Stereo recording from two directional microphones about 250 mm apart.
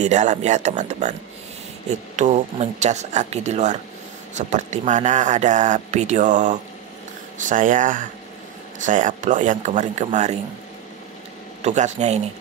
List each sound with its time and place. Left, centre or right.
0.0 s speech: right
11.6 s speech: right